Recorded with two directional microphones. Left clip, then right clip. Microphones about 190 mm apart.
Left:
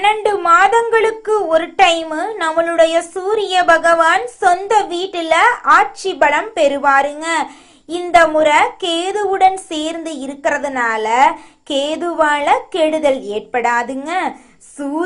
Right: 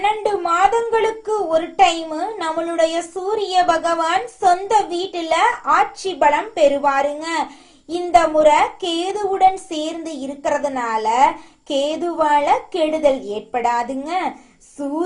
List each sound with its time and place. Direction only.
0.0 s a woman's voice: 10° left (ahead or behind)